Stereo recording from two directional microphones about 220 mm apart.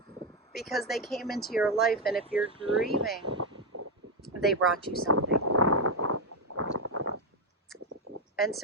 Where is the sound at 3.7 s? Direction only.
90° right.